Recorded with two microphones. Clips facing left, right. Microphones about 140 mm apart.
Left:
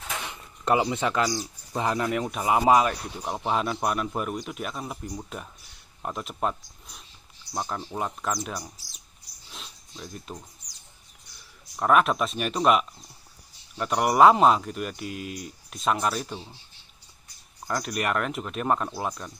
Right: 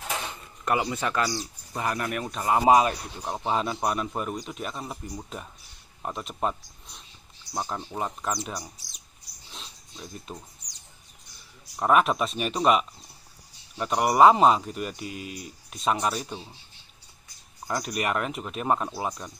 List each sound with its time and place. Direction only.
0.3 s speech: 20° left (ahead or behind)
2.6 s speech: 25° right (ahead or behind)
3.3 s speech: centre (ahead or behind)
9.5 s a sound: centre (ahead or behind)
11.7 s speech: 5° right (ahead or behind)
17.6 s speech: 5° right (ahead or behind)